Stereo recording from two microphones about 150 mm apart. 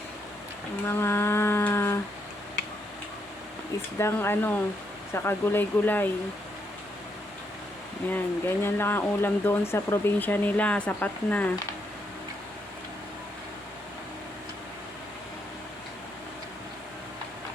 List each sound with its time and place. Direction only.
0.9 s speech: 15° left (ahead or behind)
3.9 s speech: 15° left (ahead or behind)
8.1 s speech: 15° left (ahead or behind)